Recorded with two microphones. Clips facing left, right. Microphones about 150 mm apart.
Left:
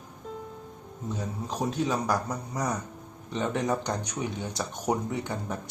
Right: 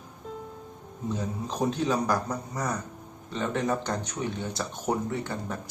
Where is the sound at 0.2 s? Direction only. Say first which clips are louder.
Even; centre (ahead or behind).